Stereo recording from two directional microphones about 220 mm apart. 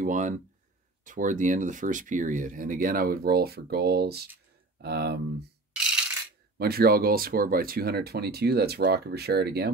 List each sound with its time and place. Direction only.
0.0 s speech: 35° right (ahead or behind)
5.8 s coin: 5° right (ahead or behind)
6.6 s speech: 45° right (ahead or behind)